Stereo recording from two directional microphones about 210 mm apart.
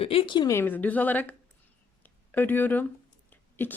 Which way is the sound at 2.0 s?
10° left (ahead or behind).